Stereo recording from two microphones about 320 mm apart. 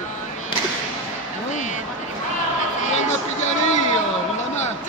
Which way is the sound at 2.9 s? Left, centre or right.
Left.